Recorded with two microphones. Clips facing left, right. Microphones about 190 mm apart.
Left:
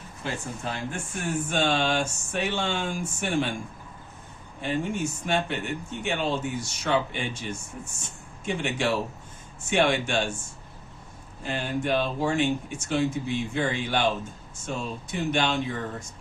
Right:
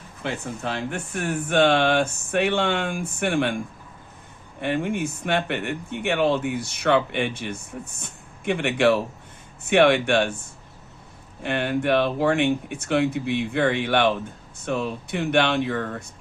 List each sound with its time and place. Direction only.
0.2 s speech: 65° right (ahead or behind)
4.6 s speech: 65° right (ahead or behind)
11.4 s speech: 65° right (ahead or behind)